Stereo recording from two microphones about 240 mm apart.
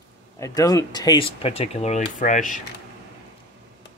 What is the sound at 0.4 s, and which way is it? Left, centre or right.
Speech, centre.